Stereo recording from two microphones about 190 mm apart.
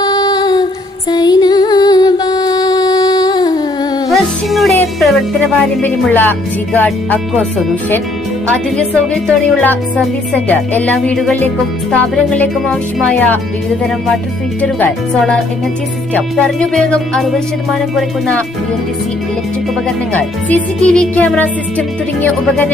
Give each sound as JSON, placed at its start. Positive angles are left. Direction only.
{"t": 0.0, "sound": "a sound", "side_deg": 20}
{"t": 1.1, "sound": "music", "side_deg": 20}
{"t": 4.1, "sound": "music", "side_deg": 0}
{"t": 5.8, "sound": "speech", "side_deg": 10}
{"t": 9.1, "sound": "speech", "side_deg": 5}
{"t": 14.6, "sound": "music", "side_deg": 5}
{"t": 20.1, "sound": "speech", "side_deg": 5}